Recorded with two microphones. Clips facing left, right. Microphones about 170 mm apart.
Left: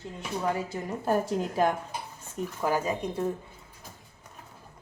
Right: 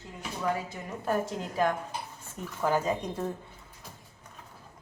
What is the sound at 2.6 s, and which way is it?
Speech, 10° left (ahead or behind).